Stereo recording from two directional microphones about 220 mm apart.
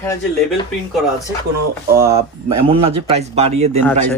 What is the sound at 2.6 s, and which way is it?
Speech, 25° right (ahead or behind).